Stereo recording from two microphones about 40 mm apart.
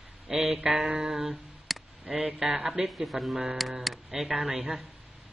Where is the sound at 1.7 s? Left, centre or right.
Centre.